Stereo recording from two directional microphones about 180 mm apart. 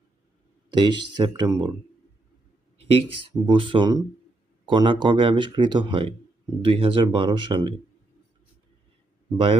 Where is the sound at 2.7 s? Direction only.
30° right (ahead or behind).